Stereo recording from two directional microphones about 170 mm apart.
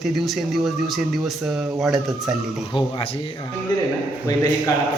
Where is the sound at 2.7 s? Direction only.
30° left (ahead or behind).